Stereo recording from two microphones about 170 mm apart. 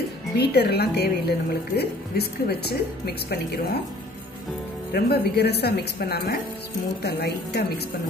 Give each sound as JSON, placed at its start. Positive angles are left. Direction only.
{"t": 0.4, "sound": "a woman's voice", "side_deg": 70}
{"t": 4.9, "sound": "a woman's voice", "side_deg": 70}